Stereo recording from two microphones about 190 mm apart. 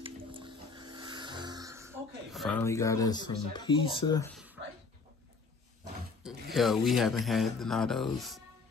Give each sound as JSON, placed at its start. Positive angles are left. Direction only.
{"t": 0.0, "sound": "music", "side_deg": -25}
{"t": 2.3, "sound": "speech", "side_deg": 0}
{"t": 2.6, "sound": "speech", "side_deg": 15}
{"t": 6.5, "sound": "speech", "side_deg": 0}